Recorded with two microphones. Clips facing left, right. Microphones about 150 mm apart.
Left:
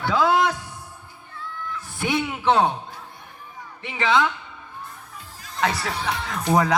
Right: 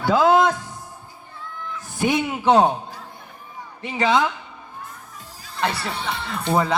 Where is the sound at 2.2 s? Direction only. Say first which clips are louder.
Right 3 dB; 40° right (ahead or behind).